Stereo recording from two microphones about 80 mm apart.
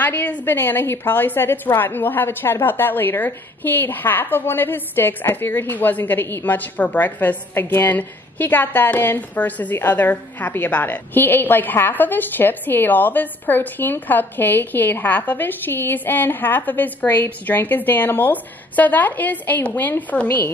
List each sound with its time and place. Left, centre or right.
0.0 s a woman's voice: left